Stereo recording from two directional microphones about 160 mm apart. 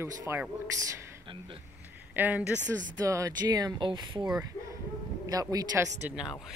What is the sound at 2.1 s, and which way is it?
Speech, 10° right (ahead or behind).